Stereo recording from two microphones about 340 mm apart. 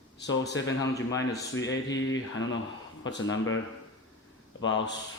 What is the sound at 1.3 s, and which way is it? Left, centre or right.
Speech, left.